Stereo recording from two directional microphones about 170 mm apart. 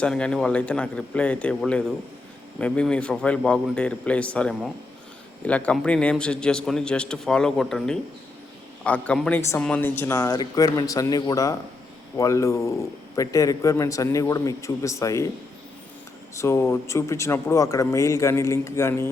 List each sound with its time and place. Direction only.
0.0 s a man's voice: 5° left (ahead or behind)
16.3 s speech: 15° left (ahead or behind)